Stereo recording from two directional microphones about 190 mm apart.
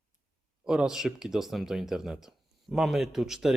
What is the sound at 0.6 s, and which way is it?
A man's voice, 5° right (ahead or behind).